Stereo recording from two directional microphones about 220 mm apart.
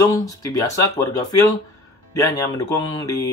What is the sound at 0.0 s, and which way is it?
Speech, 15° left (ahead or behind).